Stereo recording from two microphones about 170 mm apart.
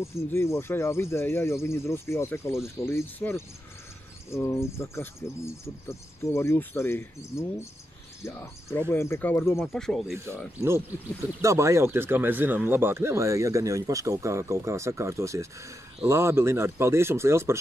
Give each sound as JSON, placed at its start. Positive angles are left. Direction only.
{"t": 0.0, "sound": "speech", "side_deg": 15}
{"t": 9.7, "sound": "speech", "side_deg": 0}
{"t": 10.1, "sound": "speech", "side_deg": -15}
{"t": 11.4, "sound": "speech", "side_deg": -15}